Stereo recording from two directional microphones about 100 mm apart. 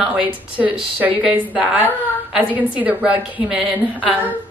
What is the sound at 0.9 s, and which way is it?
A woman's voice, 15° right (ahead or behind).